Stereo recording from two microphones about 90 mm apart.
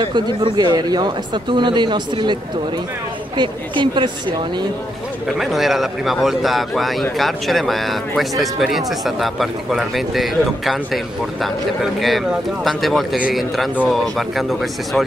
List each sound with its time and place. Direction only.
0.0 s speech: 60° right (ahead or behind)
0.7 s speech: 50° right (ahead or behind)
3.3 s speech: 60° right (ahead or behind)
5.4 s speech: centre (ahead or behind)